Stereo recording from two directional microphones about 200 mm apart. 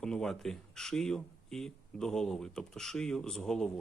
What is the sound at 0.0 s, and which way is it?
Speech, 5° left (ahead or behind).